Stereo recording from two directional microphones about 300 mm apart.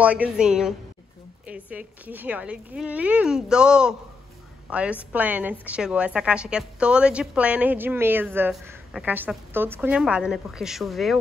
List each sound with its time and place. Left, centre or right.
0.0 s a woman's voice: centre